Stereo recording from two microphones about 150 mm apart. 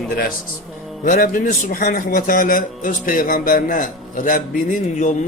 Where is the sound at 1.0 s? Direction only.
70° left (ahead or behind).